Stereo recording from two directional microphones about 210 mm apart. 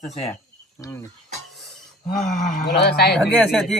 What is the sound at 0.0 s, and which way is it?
Speech, 30° left (ahead or behind).